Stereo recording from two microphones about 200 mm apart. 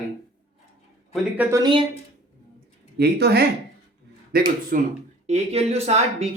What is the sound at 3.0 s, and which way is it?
Speech, 55° right (ahead or behind).